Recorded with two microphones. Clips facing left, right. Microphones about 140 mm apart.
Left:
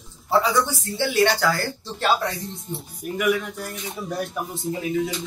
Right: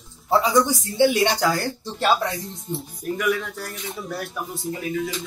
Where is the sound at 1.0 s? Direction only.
15° right (ahead or behind).